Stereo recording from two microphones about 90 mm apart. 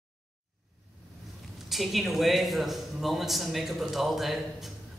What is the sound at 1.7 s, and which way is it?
A woman's voice, centre (ahead or behind).